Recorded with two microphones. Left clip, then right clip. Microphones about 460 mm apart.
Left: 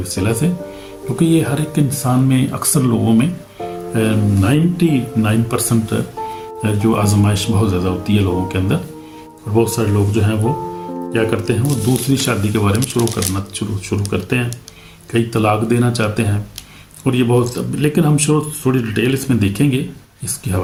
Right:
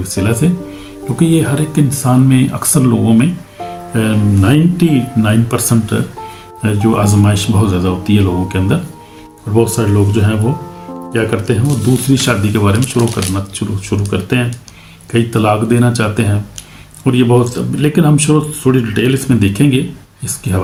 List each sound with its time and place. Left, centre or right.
0.0 s speech: left